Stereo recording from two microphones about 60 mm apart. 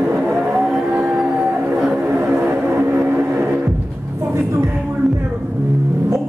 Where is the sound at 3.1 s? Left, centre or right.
Right.